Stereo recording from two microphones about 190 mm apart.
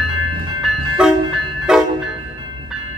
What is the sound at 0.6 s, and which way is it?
Vehicle, centre (ahead or behind).